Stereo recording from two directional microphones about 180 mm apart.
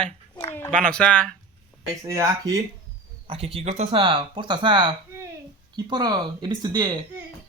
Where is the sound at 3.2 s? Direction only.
30° right (ahead or behind).